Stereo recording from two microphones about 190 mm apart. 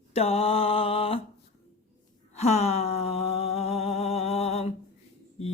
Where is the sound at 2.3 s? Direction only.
35° left (ahead or behind).